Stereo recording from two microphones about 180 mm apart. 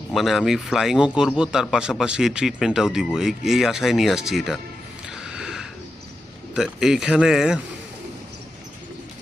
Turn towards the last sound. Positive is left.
turn(degrees=-5)  # may be behind; listen again after turning